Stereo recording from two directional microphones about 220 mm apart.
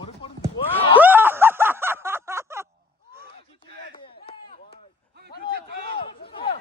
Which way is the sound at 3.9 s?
25° left (ahead or behind).